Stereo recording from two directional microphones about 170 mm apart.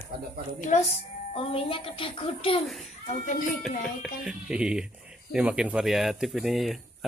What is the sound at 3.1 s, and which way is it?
Speech, 50° left (ahead or behind).